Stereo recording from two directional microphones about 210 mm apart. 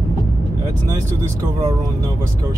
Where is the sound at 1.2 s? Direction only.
25° right (ahead or behind).